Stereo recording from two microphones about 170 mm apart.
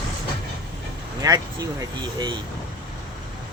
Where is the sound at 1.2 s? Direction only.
20° right (ahead or behind).